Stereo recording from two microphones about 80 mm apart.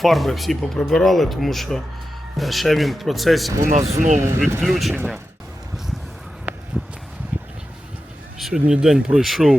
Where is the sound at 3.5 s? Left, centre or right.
Right.